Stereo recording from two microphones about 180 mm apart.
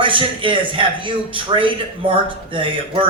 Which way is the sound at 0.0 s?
30° right (ahead or behind).